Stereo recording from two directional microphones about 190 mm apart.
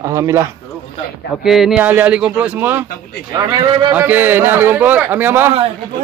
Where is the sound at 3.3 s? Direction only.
20° right (ahead or behind).